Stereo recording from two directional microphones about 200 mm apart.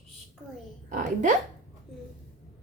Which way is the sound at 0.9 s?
40° right (ahead or behind).